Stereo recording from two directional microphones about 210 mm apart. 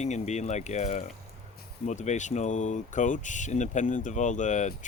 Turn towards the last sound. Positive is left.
turn(degrees=35)  # may be behind; listen again after turning